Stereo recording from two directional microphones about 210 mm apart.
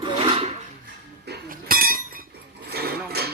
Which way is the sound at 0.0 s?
25° right (ahead or behind).